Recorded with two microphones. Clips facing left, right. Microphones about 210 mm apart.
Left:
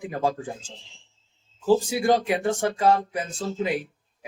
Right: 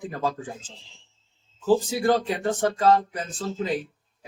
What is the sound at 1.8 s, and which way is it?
Speech, 15° left (ahead or behind).